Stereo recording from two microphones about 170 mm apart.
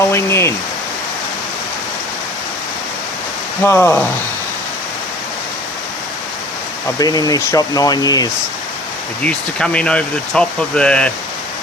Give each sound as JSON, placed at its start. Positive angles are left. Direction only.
{"t": 0.1, "sound": "speech", "side_deg": 15}
{"t": 3.6, "sound": "speech", "side_deg": 15}
{"t": 7.0, "sound": "speech", "side_deg": 20}
{"t": 9.2, "sound": "speech", "side_deg": 5}